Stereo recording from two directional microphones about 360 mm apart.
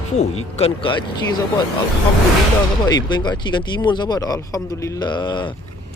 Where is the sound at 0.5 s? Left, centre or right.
Centre.